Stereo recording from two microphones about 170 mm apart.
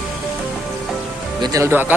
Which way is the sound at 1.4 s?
20° right (ahead or behind).